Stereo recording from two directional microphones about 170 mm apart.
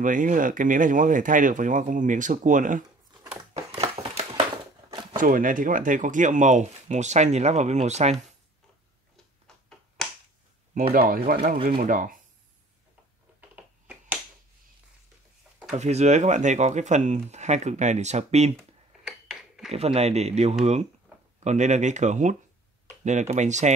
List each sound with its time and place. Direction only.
0.0 s speech: 50° right (ahead or behind)
5.1 s speech: 55° right (ahead or behind)
11.0 s speech: 60° right (ahead or behind)
11.9 s speech: 50° right (ahead or behind)
13.4 s a sound: 10° right (ahead or behind)
15.7 s speech: 40° right (ahead or behind)
19.0 s a sound: 5° right (ahead or behind)
19.7 s speech: 40° right (ahead or behind)